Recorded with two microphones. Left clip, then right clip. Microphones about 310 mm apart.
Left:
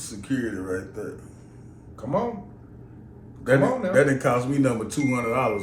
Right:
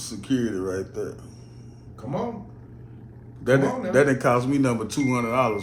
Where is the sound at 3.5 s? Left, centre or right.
Centre.